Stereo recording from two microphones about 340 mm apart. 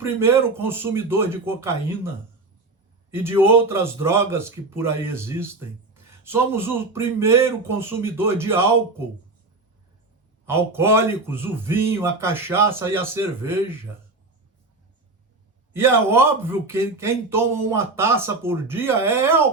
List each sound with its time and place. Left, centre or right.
0.0 s a man's voice: centre
10.4 s a man's voice: centre
15.7 s a man's voice: centre